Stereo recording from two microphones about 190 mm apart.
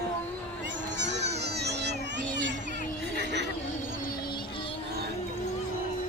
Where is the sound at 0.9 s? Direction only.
65° right (ahead or behind).